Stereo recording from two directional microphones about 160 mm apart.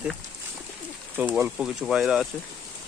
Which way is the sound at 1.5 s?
5° right (ahead or behind).